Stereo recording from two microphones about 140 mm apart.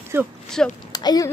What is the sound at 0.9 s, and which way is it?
Speech, 30° left (ahead or behind).